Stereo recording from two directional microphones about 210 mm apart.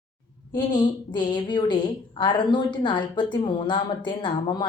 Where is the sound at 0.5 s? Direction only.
20° left (ahead or behind).